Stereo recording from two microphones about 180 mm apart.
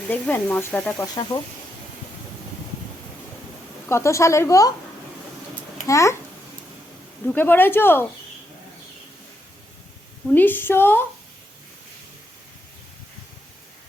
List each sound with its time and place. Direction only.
0.1 s speech: 10° left (ahead or behind)
1.0 s speech: 20° left (ahead or behind)
3.8 s speech: 15° left (ahead or behind)
5.8 s speech: 15° left (ahead or behind)
7.3 s speech: 10° left (ahead or behind)
10.3 s speech: 10° left (ahead or behind)